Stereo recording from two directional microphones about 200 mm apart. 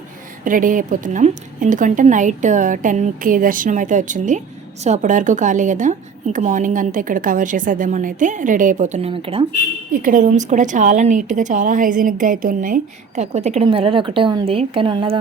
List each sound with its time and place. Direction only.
0.4 s a woman's voice: 40° right (ahead or behind)
9.9 s a woman's voice: 45° right (ahead or behind); by 15.2 s 25° right (ahead or behind)